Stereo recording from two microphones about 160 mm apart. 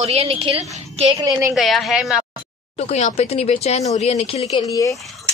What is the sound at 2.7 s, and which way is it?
A woman's voice, 40° left (ahead or behind).